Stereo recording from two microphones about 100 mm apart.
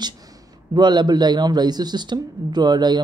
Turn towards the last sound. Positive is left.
turn(degrees=-45)  # may be behind; listen again after turning